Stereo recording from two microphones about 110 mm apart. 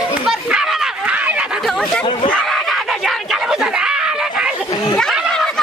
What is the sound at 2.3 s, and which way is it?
Screaming, 5° left (ahead or behind).